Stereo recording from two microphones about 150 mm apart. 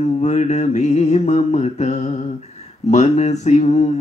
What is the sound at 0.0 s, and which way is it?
Mantra, 50° left (ahead or behind).